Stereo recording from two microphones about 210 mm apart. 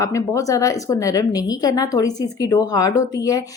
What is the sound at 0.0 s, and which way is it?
A woman's voice, 15° left (ahead or behind).